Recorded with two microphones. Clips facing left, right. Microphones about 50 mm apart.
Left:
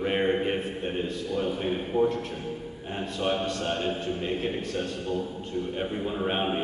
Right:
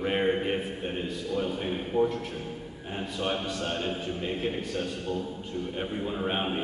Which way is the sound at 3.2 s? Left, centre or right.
Centre.